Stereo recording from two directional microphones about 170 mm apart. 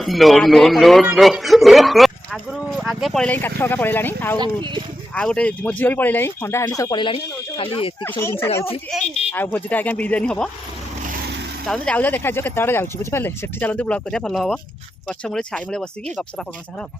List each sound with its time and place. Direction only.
0.0 s a man's voice: centre (ahead or behind)
4.4 s speech: 30° right (ahead or behind)
5.1 s speech: 5° left (ahead or behind); by 7.9 s 30° left (ahead or behind)
8.2 s speech: 15° left (ahead or behind)
11.6 s a man's voice: 5° left (ahead or behind)